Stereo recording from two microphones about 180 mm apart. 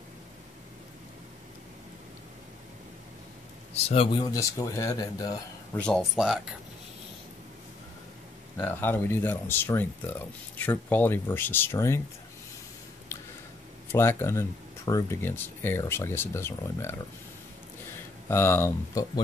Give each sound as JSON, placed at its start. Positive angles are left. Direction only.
{"t": 3.7, "sound": "speech", "side_deg": 30}
{"t": 5.8, "sound": "speech", "side_deg": 0}
{"t": 8.5, "sound": "speech", "side_deg": 10}
{"t": 13.9, "sound": "speech", "side_deg": 15}
{"t": 18.3, "sound": "speech", "side_deg": 15}